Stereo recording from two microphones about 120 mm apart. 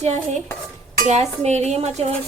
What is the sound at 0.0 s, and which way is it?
Cutlery, 65° right (ahead or behind).